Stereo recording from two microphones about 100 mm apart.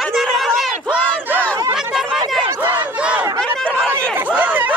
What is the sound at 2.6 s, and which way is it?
Battle cry, 15° right (ahead or behind).